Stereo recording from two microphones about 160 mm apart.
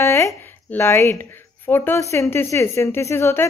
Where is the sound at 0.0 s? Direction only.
20° left (ahead or behind).